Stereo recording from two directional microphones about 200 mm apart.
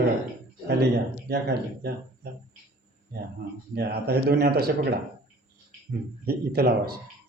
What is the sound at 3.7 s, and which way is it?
A man's voice, 55° right (ahead or behind).